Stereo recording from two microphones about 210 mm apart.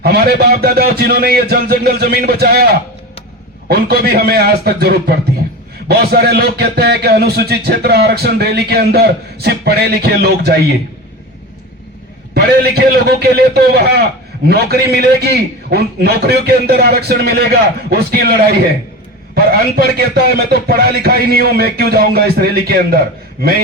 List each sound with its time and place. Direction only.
0.0 s a man's voice: 50° right (ahead or behind)
3.7 s a man's voice: 50° right (ahead or behind)
12.3 s a man's voice: 50° right (ahead or behind)